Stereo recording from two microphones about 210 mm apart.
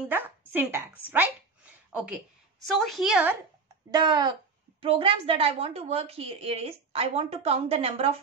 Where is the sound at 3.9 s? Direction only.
20° right (ahead or behind).